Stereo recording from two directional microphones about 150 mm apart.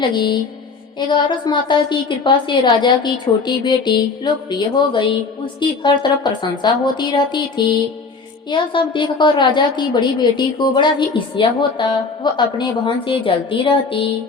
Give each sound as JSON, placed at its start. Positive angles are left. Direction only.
{"t": 0.0, "sound": "a woman's voice", "side_deg": 30}